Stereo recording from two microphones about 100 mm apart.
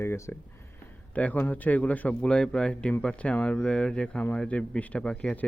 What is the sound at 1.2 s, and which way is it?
Speech, 15° left (ahead or behind).